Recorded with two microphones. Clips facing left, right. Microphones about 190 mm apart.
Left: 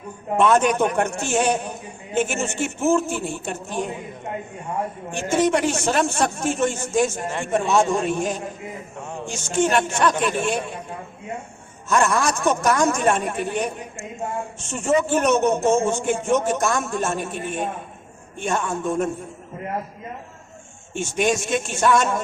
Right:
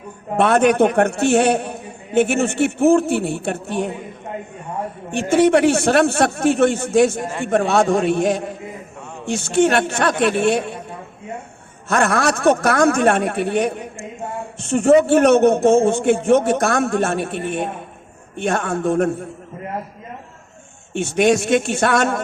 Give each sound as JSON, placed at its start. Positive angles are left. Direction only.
{"t": 0.3, "sound": "a man's voice", "side_deg": -60}
{"t": 5.4, "sound": "a man's voice", "side_deg": -65}
{"t": 9.6, "sound": "a man's voice", "side_deg": -60}
{"t": 11.9, "sound": "a man's voice", "side_deg": -60}
{"t": 20.9, "sound": "a man's voice", "side_deg": -60}